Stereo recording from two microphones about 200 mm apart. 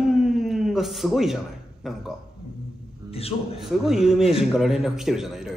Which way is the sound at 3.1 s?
30° left (ahead or behind).